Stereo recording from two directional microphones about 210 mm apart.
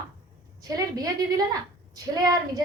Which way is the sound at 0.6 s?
20° right (ahead or behind).